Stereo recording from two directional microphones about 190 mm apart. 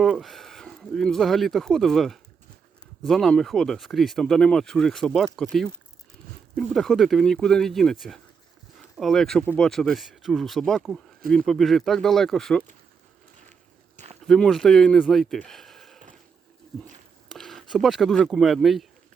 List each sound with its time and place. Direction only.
0.0 s speech: centre (ahead or behind)
13.9 s walk: 35° right (ahead or behind)
14.3 s speech: 5° left (ahead or behind)
17.2 s speech: centre (ahead or behind)